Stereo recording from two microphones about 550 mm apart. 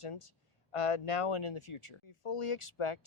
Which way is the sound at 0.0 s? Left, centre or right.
Left.